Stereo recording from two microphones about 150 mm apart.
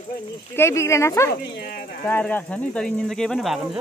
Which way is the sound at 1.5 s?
90° left.